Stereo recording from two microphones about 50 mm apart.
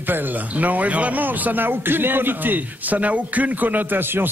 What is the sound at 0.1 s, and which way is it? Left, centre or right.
Speech, right.